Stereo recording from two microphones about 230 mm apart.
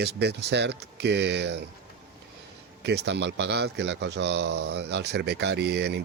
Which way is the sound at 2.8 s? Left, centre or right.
Right.